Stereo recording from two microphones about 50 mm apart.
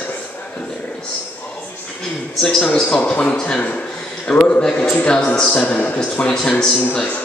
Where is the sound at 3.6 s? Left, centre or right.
Left.